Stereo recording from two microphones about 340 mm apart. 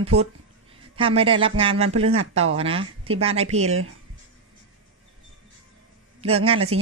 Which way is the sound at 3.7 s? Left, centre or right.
Right.